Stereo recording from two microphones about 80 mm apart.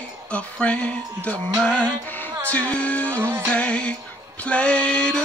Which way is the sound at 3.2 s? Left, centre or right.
Right.